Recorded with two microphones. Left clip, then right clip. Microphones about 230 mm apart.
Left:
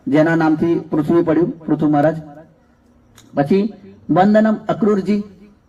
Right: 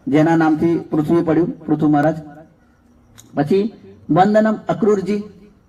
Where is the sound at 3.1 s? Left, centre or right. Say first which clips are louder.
Left 1 dB; left.